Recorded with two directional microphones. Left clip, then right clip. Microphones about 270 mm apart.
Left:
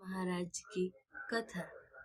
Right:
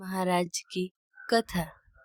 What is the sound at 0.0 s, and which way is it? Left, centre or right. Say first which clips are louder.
Speech: right 13 dB; right.